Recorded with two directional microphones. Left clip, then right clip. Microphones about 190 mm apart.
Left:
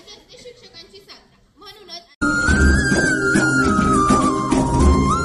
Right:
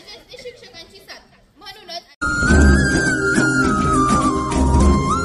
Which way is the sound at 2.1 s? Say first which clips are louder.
Even; centre (ahead or behind).